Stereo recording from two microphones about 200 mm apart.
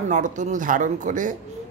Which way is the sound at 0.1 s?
40° right (ahead or behind).